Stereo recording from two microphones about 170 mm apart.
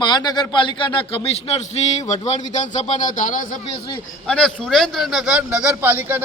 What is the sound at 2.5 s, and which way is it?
Speech, 45° left (ahead or behind).